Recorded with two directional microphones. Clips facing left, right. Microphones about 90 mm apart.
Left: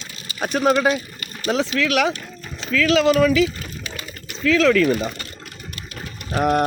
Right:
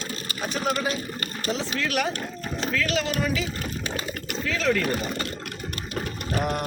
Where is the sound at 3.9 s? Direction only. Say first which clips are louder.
Right 4 dB; 25° right (ahead or behind).